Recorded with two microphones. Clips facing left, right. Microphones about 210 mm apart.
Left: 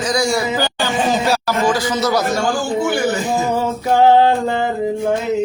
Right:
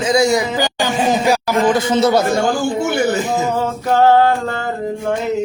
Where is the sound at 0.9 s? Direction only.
15° right (ahead or behind).